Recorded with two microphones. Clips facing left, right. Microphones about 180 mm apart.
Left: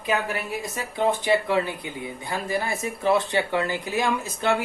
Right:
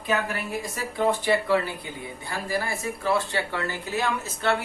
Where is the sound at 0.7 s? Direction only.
20° left (ahead or behind).